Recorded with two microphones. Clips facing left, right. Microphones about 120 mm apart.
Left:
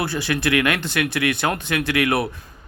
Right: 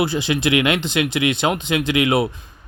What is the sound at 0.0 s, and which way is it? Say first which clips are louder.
A man's voice: right 3 dB; 20° right (ahead or behind).